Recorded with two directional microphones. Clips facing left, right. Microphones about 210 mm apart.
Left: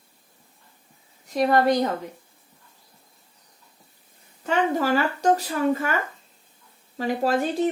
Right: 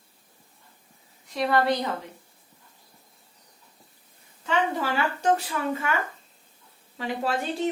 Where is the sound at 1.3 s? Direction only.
45° left (ahead or behind).